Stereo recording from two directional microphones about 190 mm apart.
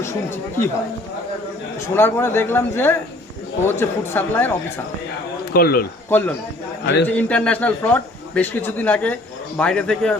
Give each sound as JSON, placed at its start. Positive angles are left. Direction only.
{"t": 0.0, "sound": "a man's voice", "side_deg": 15}
{"t": 1.9, "sound": "a man's voice", "side_deg": 10}
{"t": 5.5, "sound": "speech", "side_deg": 55}
{"t": 6.1, "sound": "a man's voice", "side_deg": 10}